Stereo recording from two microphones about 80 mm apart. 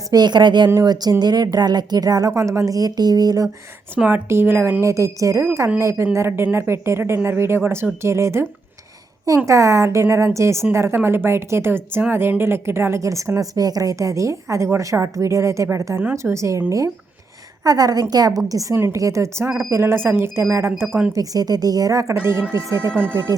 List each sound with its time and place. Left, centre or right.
0.1 s a woman's voice: right
0.7 s a woman's voice: right
3.9 s speech: right
4.8 s a woman's voice: right
9.5 s a woman's voice: right
17.6 s a woman's voice: right
21.2 s a woman's voice: right
22.1 s a woman's voice: right
23.0 s speech: right